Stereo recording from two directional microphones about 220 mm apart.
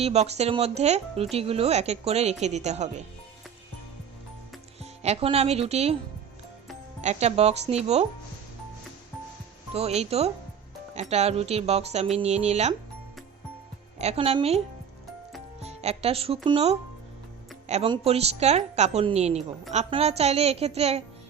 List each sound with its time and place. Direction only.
0.0 s speech: 30° right (ahead or behind)
4.8 s speech: 25° right (ahead or behind)
7.0 s speech: 30° right (ahead or behind)
9.7 s speech: 30° right (ahead or behind)
14.0 s speech: 30° right (ahead or behind)
15.6 s speech: 30° right (ahead or behind)